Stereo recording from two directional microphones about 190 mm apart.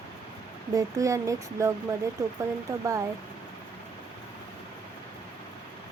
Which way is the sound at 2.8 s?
15° right (ahead or behind).